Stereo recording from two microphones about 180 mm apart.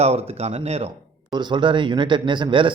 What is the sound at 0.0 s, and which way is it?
Speech, 35° right (ahead or behind).